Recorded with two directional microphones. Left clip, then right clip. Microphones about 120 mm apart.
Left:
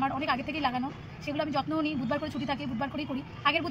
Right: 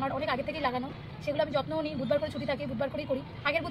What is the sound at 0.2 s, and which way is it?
Speech, 15° right (ahead or behind).